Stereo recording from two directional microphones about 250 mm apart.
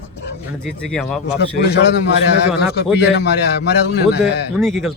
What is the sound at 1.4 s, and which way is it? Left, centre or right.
A man's voice, left.